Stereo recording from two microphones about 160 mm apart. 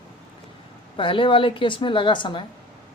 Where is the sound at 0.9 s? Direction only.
35° left (ahead or behind).